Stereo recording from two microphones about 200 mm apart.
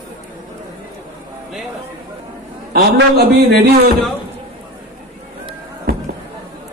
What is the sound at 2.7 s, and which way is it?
Speech, 50° right (ahead or behind).